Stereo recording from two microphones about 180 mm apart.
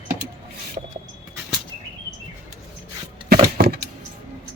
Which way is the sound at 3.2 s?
60° right (ahead or behind).